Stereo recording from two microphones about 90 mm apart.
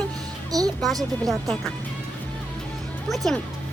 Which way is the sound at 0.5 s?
40° right (ahead or behind).